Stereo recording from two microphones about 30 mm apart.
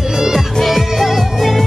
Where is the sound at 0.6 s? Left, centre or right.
Centre.